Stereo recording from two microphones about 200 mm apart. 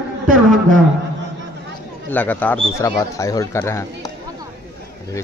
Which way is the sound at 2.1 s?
10° left (ahead or behind).